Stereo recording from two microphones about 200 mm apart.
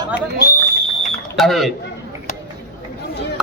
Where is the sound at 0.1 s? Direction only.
50° left (ahead or behind).